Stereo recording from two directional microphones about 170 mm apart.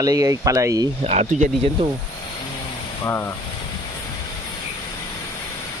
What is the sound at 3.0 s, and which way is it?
Speech, 15° left (ahead or behind).